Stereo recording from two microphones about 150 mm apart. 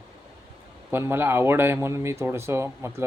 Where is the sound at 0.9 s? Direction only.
15° right (ahead or behind).